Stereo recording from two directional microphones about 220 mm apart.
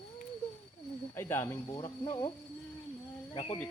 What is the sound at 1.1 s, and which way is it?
Speech, 10° left (ahead or behind).